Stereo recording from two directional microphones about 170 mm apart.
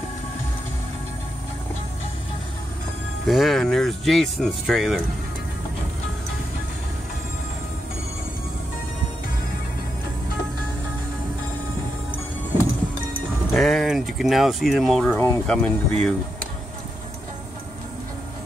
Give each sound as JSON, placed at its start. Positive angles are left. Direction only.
{"t": 3.3, "sound": "speech", "side_deg": 0}
{"t": 13.5, "sound": "speech", "side_deg": 0}
{"t": 15.1, "sound": "speech", "side_deg": 15}
{"t": 15.4, "sound": "speech", "side_deg": 5}